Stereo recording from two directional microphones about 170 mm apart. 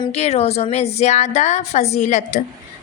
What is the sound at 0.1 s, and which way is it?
A woman's voice, 35° left (ahead or behind).